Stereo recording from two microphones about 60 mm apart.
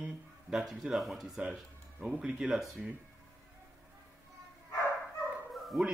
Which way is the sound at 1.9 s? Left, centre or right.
Centre.